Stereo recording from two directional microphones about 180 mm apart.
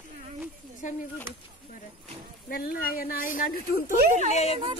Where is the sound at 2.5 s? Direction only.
55° left (ahead or behind).